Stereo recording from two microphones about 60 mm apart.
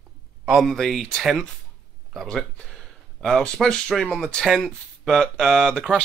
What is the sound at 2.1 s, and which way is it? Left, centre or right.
Speech, centre.